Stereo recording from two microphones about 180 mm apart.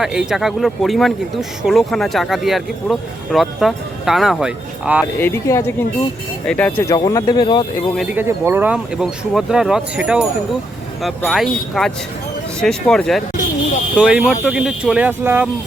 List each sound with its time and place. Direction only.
0.0 s speech: 5° right (ahead or behind)
5.2 s speech: 15° left (ahead or behind)
6.9 s speech: 20° left (ahead or behind)
8.1 s speech: 10° right (ahead or behind)